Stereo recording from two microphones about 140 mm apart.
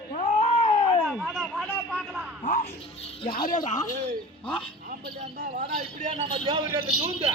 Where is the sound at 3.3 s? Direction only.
85° left.